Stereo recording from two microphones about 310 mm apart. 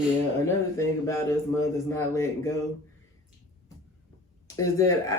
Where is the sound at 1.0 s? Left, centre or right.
Centre.